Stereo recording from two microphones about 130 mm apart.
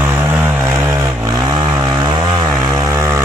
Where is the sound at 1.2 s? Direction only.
30° right (ahead or behind).